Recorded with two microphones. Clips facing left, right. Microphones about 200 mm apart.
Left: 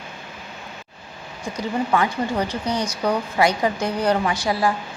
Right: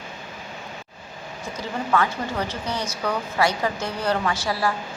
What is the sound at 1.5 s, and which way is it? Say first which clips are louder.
A woman's voice: left 2 dB; 15° left (ahead or behind).